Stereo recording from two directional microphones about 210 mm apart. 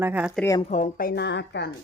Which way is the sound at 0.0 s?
5° right (ahead or behind).